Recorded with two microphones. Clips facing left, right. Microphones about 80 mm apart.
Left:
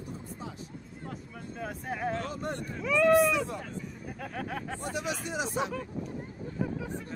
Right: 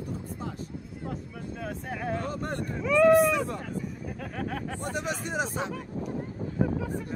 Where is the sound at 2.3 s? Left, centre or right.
Right.